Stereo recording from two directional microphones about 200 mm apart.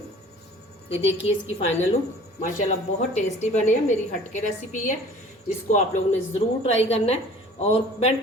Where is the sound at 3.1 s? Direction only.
35° left (ahead or behind).